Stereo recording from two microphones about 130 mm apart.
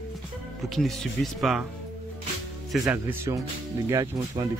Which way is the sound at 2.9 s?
25° right (ahead or behind).